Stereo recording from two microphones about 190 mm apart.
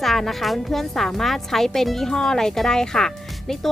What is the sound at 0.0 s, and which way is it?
A woman's voice, centre (ahead or behind).